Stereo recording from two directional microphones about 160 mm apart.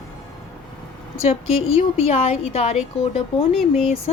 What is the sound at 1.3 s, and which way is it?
A woman's voice, 40° left (ahead or behind).